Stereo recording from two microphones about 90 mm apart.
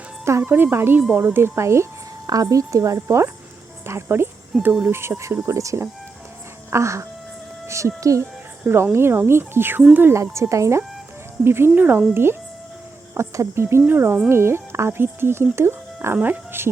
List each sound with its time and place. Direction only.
0.3 s a woman's voice: 25° right (ahead or behind)
4.5 s speech: centre (ahead or behind)
4.9 s a woman's voice: 30° right (ahead or behind)
10.2 s a woman's voice: 35° right (ahead or behind)